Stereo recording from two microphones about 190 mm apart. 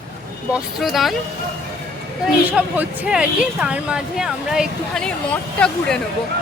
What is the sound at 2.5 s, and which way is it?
Speech, 10° right (ahead or behind).